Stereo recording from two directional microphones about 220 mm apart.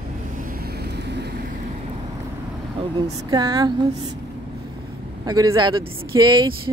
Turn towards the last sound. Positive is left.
turn(degrees=-20)  # may be behind; listen again after turning